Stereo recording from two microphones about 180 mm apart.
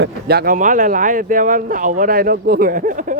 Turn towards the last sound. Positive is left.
turn(degrees=-45)  # may be behind; listen again after turning